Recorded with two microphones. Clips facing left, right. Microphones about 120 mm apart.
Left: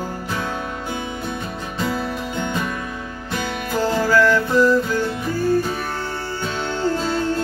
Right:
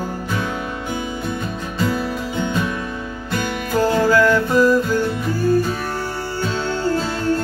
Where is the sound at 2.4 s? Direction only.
5° right (ahead or behind).